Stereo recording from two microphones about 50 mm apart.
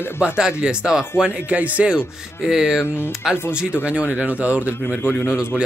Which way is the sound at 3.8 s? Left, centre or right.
Right.